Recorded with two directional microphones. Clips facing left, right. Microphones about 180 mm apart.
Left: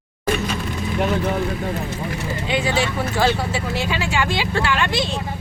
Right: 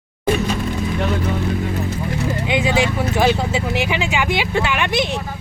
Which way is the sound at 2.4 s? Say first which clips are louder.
Right 2 dB; 15° right (ahead or behind).